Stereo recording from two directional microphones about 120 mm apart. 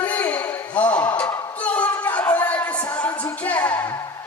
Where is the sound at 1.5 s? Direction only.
10° left (ahead or behind).